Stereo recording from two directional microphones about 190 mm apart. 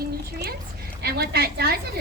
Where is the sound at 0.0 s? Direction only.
55° right (ahead or behind).